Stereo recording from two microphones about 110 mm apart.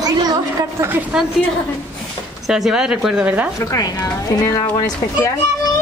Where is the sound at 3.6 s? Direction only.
35° left (ahead or behind).